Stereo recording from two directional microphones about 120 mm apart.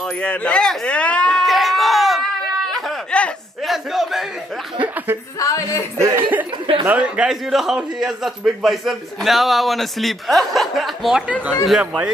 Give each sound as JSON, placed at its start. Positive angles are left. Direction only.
{"t": 0.2, "sound": "a sound", "side_deg": 10}
{"t": 3.7, "sound": "a man's voice", "side_deg": 0}
{"t": 4.7, "sound": "speech", "side_deg": -15}
{"t": 5.4, "sound": "speech", "side_deg": 30}
{"t": 5.9, "sound": "speech", "side_deg": -25}
{"t": 6.9, "sound": "a man's voice", "side_deg": -10}